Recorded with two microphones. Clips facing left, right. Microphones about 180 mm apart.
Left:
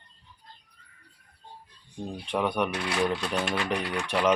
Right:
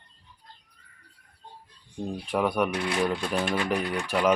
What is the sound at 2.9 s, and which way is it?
Speech, 15° right (ahead or behind).